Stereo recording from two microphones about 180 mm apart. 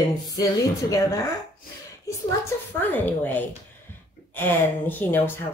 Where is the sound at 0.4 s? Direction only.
20° left (ahead or behind).